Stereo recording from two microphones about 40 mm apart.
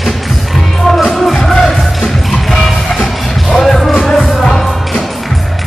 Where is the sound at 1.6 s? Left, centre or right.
Centre.